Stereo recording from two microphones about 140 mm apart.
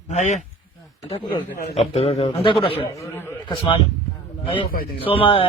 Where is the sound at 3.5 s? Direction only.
35° left (ahead or behind).